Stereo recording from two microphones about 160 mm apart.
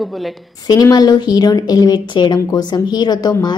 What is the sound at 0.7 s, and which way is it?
A woman's voice, 25° left (ahead or behind).